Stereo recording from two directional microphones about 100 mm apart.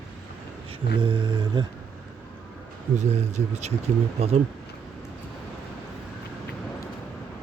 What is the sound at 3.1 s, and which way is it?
Speech, 90° right.